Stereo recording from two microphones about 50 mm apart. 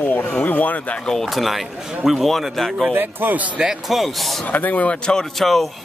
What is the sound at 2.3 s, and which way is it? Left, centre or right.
Speech, centre.